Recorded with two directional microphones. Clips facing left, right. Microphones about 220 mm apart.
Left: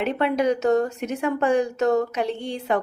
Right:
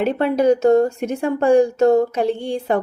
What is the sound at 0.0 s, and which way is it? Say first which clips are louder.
A woman's voice: right 5 dB; 35° right (ahead or behind).